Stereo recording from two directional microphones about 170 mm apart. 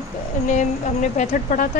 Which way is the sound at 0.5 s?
45° left (ahead or behind).